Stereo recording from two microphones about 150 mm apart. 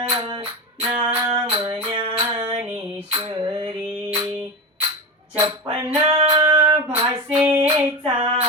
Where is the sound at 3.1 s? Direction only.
30° right (ahead or behind).